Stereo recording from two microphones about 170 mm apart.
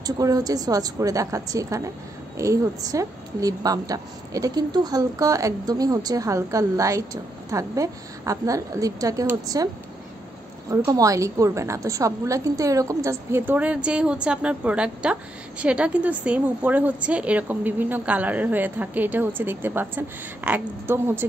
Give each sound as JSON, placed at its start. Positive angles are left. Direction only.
{"t": 0.0, "sound": "a woman's voice", "side_deg": -20}
{"t": 10.7, "sound": "a woman's voice", "side_deg": -20}